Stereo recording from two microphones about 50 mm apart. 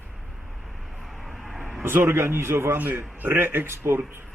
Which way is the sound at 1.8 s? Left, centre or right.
Right.